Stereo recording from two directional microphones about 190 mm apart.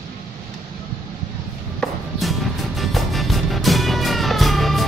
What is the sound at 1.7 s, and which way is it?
Music, centre (ahead or behind).